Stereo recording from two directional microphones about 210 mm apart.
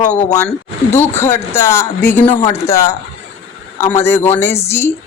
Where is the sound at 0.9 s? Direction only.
10° left (ahead or behind).